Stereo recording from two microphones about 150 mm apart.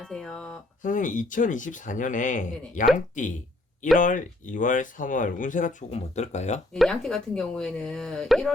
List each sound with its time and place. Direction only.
0.0 s speech: 5° left (ahead or behind)
0.8 s speech: 60° left (ahead or behind)
6.7 s speech: 5° left (ahead or behind)